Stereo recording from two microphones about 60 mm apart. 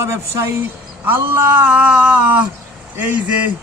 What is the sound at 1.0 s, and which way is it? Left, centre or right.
Speech, right.